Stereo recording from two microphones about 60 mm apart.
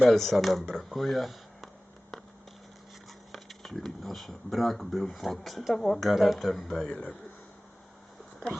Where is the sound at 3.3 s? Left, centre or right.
Centre.